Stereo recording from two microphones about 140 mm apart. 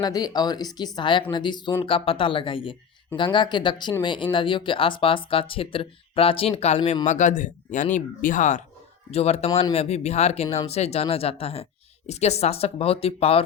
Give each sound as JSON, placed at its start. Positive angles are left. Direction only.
{"t": 0.0, "sound": "speech", "side_deg": 30}
{"t": 7.0, "sound": "speech", "side_deg": 60}
{"t": 9.1, "sound": "speech", "side_deg": 50}